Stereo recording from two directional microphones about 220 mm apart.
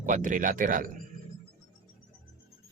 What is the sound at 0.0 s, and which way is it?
Speech, 35° right (ahead or behind).